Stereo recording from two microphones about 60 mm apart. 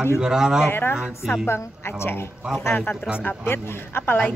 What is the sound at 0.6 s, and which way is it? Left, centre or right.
Speech, left.